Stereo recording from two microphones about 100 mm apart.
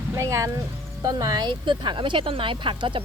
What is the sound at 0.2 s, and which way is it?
Speech, 30° right (ahead or behind).